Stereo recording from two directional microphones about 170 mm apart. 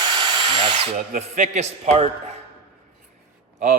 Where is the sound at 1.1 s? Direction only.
45° right (ahead or behind).